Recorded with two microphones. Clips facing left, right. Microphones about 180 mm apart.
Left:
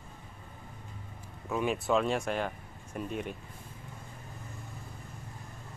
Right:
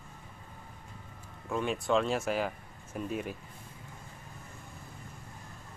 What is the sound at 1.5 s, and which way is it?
Speech, 5° left (ahead or behind).